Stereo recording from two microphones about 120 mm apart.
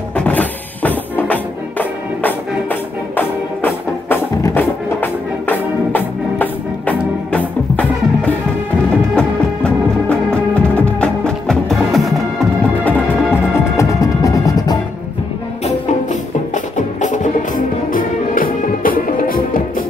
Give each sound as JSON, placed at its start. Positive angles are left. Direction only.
{"t": 0.1, "sound": "music", "side_deg": 10}
{"t": 12.8, "sound": "music", "side_deg": 15}
{"t": 13.7, "sound": "music", "side_deg": 25}
{"t": 15.6, "sound": "music", "side_deg": 85}